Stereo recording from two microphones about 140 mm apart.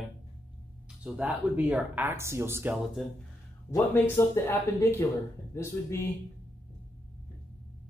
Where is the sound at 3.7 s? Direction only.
20° left (ahead or behind).